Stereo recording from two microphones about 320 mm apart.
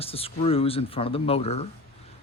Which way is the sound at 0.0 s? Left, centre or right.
Centre.